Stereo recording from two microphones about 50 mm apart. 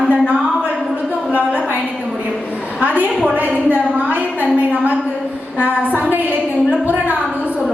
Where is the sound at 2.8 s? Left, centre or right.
Right.